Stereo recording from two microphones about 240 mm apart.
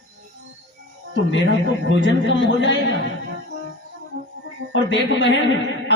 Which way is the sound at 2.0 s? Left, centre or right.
Left.